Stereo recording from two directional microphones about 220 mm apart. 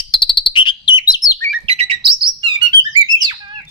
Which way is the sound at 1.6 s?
30° right (ahead or behind).